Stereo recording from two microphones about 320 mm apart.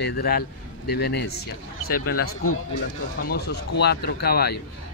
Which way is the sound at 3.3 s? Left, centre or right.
Left.